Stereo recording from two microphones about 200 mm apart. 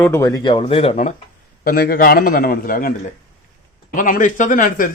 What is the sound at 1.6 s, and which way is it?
A man's voice, 50° left (ahead or behind).